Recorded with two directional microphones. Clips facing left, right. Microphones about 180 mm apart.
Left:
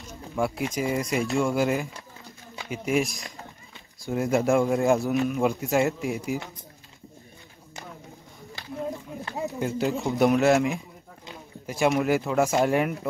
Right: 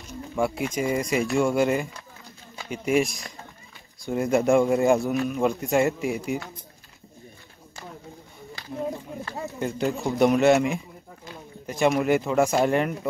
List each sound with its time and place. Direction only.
0.4 s speech: 5° left (ahead or behind)
9.2 s a sound: 15° left (ahead or behind)
9.7 s speech: centre (ahead or behind)